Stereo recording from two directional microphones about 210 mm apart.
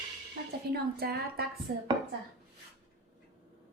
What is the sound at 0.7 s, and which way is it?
Speech, 50° right (ahead or behind).